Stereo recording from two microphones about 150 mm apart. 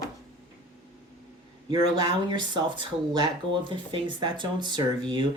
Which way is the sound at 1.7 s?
30° right (ahead or behind).